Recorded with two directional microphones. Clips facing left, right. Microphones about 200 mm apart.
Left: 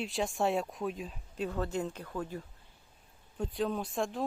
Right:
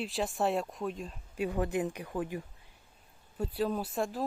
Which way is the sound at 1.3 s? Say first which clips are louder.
Right 3 dB; 15° right (ahead or behind).